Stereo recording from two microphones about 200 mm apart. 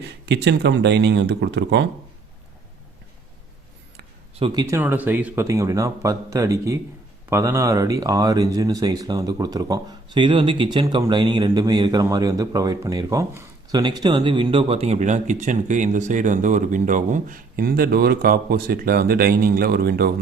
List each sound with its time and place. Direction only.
0.0 s speech: 60° right (ahead or behind)
4.4 s speech: 25° right (ahead or behind)
4.7 s a man's voice: 10° right (ahead or behind); by 20.1 s 50° right (ahead or behind)